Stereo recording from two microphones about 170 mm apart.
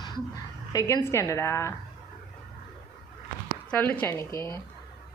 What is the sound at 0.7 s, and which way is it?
A woman's voice, 20° left (ahead or behind).